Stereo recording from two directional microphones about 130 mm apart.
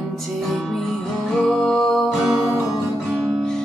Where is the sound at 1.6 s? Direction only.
Centre (ahead or behind).